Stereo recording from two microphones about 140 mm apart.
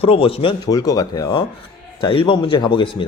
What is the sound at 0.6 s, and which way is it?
Speech, 25° left (ahead or behind).